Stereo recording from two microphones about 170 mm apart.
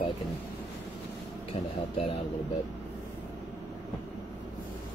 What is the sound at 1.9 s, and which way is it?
Speech, 30° left (ahead or behind).